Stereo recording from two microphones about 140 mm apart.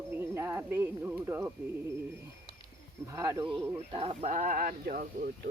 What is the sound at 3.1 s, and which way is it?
Speech, 25° right (ahead or behind).